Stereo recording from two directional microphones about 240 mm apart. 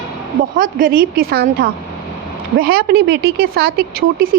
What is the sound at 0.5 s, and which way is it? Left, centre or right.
Speech, right.